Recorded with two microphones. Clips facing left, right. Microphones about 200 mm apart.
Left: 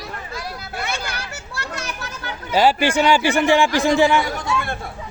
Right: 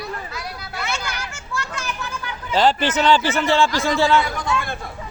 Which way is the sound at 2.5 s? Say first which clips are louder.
Left 2 dB; 10° left (ahead or behind).